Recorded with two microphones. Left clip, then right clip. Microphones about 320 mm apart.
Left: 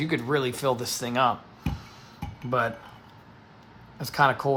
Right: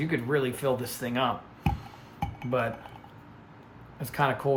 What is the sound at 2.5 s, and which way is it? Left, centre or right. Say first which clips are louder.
Speech: left 3 dB; centre.